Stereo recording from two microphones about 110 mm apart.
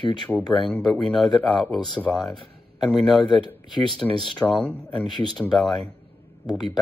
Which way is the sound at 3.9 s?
Centre (ahead or behind).